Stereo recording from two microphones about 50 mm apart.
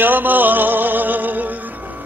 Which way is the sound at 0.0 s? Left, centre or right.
Right.